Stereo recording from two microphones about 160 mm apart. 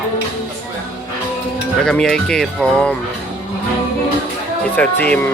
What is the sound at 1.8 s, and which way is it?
Speech, 5° left (ahead or behind).